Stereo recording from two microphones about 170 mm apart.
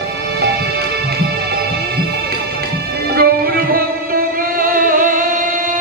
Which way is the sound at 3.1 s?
60° right (ahead or behind).